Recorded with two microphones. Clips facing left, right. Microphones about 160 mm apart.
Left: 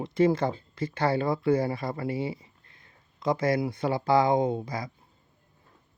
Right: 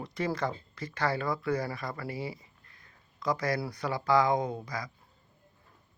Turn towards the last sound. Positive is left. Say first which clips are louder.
# left 6 dB
turn(degrees=25)  # may be behind; listen again after turning